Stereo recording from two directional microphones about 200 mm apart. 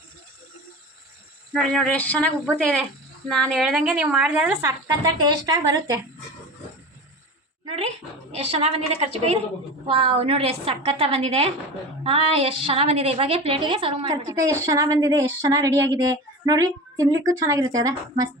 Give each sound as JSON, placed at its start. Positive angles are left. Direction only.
{"t": 1.5, "sound": "a woman's voice", "side_deg": 5}
{"t": 5.0, "sound": "a woman's voice", "side_deg": -20}
{"t": 8.3, "sound": "a woman's voice", "side_deg": -30}